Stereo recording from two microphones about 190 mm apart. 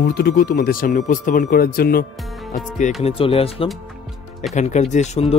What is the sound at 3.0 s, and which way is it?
Speech, 30° left (ahead or behind).